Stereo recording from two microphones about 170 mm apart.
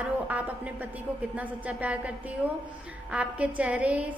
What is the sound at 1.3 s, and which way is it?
A woman's voice, 10° right (ahead or behind).